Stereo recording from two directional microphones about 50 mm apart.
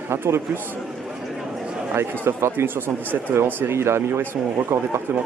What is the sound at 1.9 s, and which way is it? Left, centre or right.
A man's voice, right.